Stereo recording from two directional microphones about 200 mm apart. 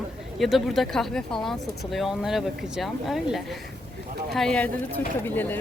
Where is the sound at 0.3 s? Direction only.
Centre (ahead or behind).